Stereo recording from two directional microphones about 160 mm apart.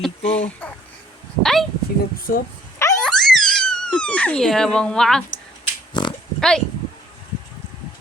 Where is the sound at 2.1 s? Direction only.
65° left (ahead or behind).